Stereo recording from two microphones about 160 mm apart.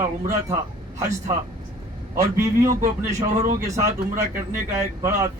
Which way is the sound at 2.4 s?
20° right (ahead or behind).